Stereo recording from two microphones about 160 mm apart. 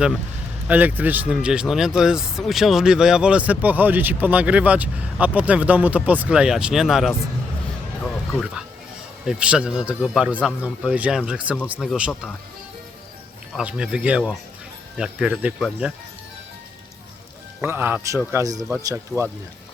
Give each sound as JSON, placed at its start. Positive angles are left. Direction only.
{"t": 0.7, "sound": "speech", "side_deg": -10}
{"t": 9.2, "sound": "a man's voice", "side_deg": -5}
{"t": 13.6, "sound": "a man's voice", "side_deg": -5}
{"t": 17.6, "sound": "speech", "side_deg": -15}